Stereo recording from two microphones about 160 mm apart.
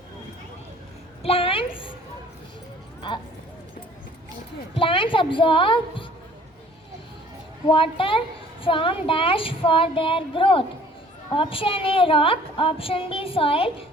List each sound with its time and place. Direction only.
1.2 s a sound: 35° left (ahead or behind)
4.8 s a woman's voice: 30° left (ahead or behind)
7.7 s a woman's voice: 35° left (ahead or behind)